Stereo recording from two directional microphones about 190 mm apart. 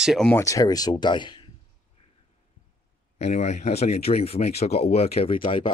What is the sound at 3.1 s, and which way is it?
Speech, 35° left (ahead or behind).